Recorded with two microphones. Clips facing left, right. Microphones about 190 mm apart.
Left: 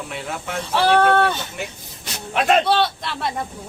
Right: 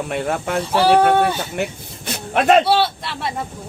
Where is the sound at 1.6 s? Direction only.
50° right (ahead or behind).